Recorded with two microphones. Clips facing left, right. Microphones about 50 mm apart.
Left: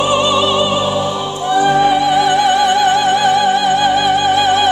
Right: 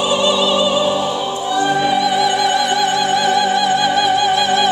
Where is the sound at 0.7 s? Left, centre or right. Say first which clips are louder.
Even; centre.